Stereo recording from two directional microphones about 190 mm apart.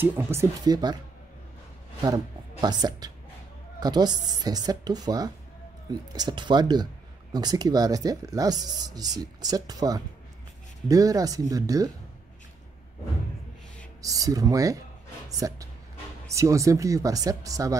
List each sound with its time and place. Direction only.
0.0 s speech: 10° right (ahead or behind)
2.0 s speech: 20° right (ahead or behind)
14.0 s speech: 20° right (ahead or behind)